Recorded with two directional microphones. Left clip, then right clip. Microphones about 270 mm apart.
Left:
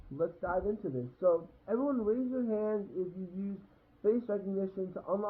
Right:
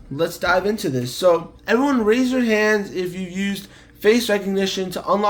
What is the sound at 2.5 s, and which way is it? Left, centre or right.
Speech, right.